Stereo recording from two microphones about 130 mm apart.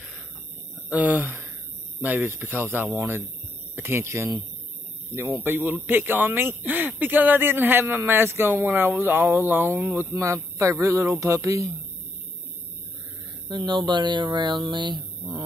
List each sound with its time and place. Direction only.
0.8 s speech: 10° right (ahead or behind)
13.5 s speech: 35° right (ahead or behind)